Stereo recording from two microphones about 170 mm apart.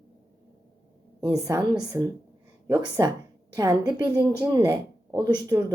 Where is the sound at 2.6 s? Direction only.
20° right (ahead or behind).